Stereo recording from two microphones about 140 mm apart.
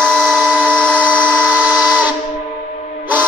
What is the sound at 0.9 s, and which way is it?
Steam whistle, 15° right (ahead or behind).